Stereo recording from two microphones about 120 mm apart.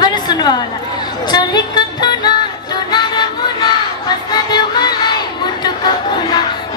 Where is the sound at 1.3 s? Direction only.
35° left (ahead or behind).